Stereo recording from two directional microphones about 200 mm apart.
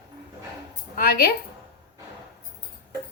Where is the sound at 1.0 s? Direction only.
50° left (ahead or behind).